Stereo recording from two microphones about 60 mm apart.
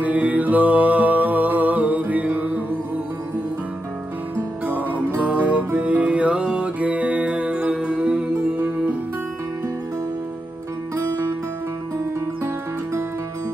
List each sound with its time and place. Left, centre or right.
0.0 s music: right
4.6 s music: right